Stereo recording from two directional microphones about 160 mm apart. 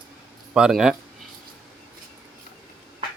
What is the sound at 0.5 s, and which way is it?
Speech, 5° right (ahead or behind).